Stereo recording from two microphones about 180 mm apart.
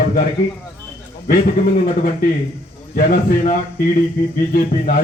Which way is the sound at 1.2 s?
55° left (ahead or behind).